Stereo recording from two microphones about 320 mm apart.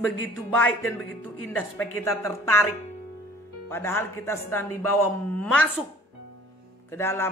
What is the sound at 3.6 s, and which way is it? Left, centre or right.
Speech, centre.